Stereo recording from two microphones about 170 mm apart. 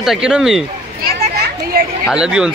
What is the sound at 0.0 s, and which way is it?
Speech, 5° right (ahead or behind).